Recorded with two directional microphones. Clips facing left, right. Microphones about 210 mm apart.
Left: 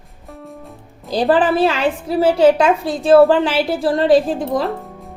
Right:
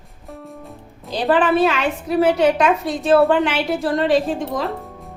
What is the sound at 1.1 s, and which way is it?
A woman's voice, 35° left (ahead or behind).